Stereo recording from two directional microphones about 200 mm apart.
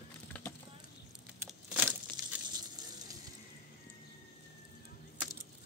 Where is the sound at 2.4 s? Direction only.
20° right (ahead or behind).